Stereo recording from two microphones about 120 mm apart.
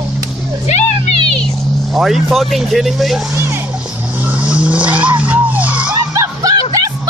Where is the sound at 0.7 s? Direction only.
65° left (ahead or behind).